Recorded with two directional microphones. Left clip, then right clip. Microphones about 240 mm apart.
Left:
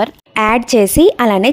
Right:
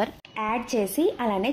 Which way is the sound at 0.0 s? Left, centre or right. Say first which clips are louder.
Left 14 dB; left.